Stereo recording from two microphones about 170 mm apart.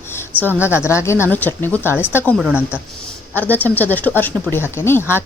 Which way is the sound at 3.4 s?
10° left (ahead or behind).